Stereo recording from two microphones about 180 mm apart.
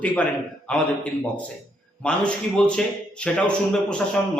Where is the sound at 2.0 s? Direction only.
5° left (ahead or behind).